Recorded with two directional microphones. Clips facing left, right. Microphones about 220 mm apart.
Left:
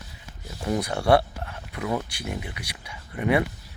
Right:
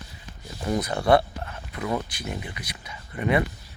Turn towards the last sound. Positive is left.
turn(degrees=10)  # may be behind; listen again after turning